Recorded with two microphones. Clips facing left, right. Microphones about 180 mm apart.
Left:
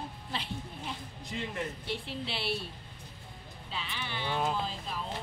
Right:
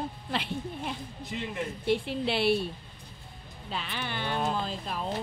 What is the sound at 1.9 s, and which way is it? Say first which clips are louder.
Speech: right 9 dB; 55° right (ahead or behind).